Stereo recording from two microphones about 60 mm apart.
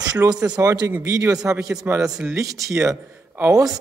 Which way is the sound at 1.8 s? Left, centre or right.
Right.